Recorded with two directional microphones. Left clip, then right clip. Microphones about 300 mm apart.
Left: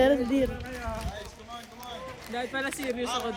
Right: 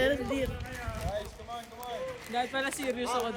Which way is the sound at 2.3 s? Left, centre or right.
Centre.